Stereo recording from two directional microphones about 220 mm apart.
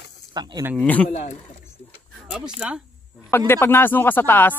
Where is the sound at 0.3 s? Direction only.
20° right (ahead or behind).